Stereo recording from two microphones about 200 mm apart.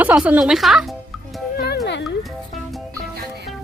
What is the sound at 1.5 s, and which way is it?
Music, 55° left (ahead or behind).